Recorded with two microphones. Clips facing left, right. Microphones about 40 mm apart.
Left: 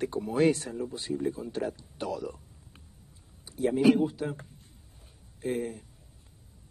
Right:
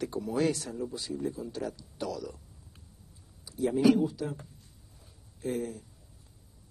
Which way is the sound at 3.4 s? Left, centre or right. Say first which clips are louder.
Left 1 dB; left.